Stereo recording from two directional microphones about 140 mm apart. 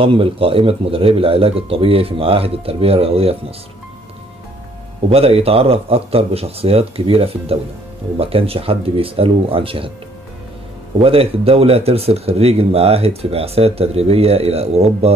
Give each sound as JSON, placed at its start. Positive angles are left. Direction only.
{"t": 0.0, "sound": "speech", "side_deg": -40}
{"t": 5.1, "sound": "speech", "side_deg": -45}
{"t": 11.0, "sound": "speech", "side_deg": -40}